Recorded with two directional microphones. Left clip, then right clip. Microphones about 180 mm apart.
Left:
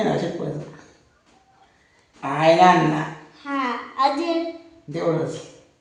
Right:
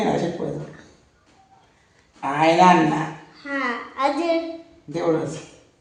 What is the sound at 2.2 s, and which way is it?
Speech, centre (ahead or behind).